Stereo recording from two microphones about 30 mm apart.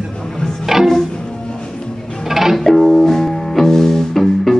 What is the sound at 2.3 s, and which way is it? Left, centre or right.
Music, centre.